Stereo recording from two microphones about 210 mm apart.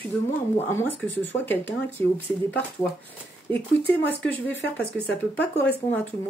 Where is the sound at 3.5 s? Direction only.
10° left (ahead or behind).